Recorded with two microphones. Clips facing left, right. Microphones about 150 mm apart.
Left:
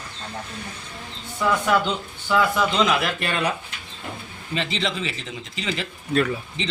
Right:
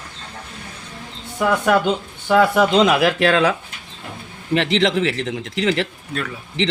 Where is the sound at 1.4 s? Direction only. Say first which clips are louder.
Right 4 dB; 55° right (ahead or behind).